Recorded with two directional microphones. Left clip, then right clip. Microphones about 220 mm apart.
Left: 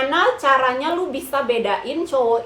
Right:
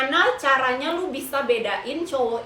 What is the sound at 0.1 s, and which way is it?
A woman's voice, 20° left (ahead or behind).